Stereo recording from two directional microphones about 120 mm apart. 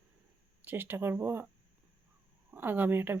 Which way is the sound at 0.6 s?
15° right (ahead or behind).